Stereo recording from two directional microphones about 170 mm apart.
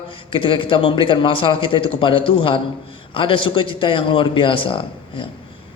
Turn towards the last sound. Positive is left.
turn(degrees=30)  # may be behind; listen again after turning